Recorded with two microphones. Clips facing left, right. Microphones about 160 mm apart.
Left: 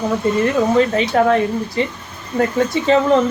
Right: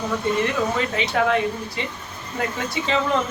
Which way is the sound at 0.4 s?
40° left (ahead or behind).